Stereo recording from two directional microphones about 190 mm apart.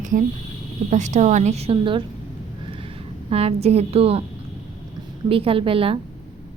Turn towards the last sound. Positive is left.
turn(degrees=-30)  # may be behind; listen again after turning